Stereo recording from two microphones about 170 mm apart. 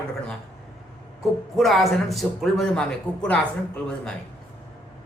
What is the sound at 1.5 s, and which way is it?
Speech, centre (ahead or behind).